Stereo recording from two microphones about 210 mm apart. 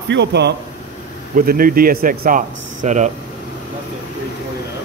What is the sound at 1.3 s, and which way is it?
Speech, 45° right (ahead or behind).